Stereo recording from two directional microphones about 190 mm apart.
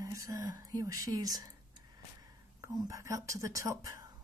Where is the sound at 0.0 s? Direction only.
15° right (ahead or behind).